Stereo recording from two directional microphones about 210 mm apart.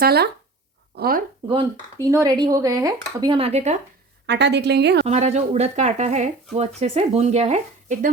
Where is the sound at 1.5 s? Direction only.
20° right (ahead or behind).